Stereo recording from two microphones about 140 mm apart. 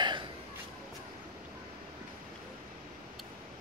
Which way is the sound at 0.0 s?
35° right (ahead or behind).